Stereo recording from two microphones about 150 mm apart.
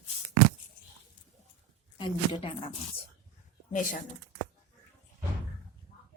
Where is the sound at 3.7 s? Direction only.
60° left (ahead or behind).